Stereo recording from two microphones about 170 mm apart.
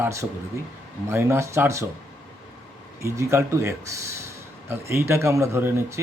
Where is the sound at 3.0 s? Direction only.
15° right (ahead or behind).